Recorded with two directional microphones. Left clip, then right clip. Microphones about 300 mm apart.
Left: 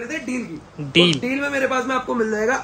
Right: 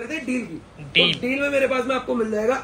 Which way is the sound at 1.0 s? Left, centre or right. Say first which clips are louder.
Left 1 dB; left.